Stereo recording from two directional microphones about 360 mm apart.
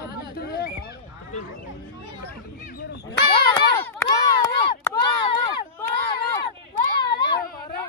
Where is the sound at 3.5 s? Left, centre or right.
Centre.